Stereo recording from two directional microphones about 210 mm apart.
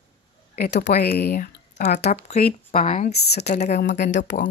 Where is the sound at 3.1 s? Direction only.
50° left (ahead or behind).